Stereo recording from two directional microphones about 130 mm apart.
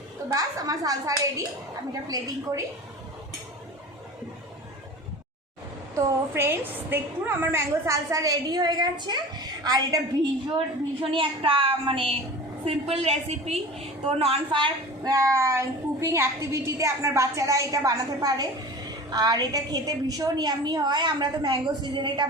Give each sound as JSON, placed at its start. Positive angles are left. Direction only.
{"t": 0.3, "sound": "a woman's voice", "side_deg": -25}
{"t": 5.9, "sound": "a woman's voice", "side_deg": -20}
{"t": 11.1, "sound": "a woman's voice", "side_deg": -40}
{"t": 14.5, "sound": "a woman's voice", "side_deg": -35}